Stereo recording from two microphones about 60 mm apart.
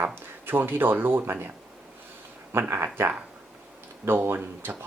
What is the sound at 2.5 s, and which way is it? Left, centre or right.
Speech, right.